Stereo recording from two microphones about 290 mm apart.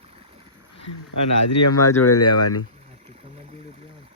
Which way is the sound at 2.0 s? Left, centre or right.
Left.